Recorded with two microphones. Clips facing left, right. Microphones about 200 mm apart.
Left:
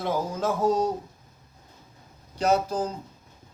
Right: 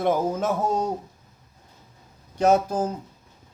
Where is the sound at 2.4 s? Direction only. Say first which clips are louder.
Right 4 dB; 50° right (ahead or behind).